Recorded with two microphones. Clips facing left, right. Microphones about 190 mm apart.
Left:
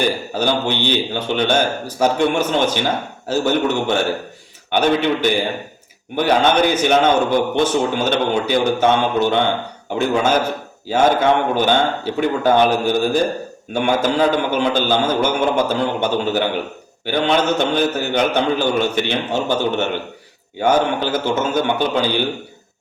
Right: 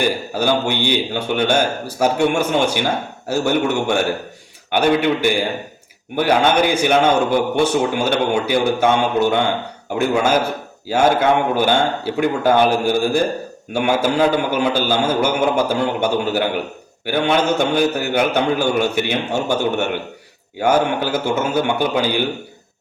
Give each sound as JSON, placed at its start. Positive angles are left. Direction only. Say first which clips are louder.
{"t": 0.0, "sound": "a man's voice", "louder": "even", "side_deg": -10}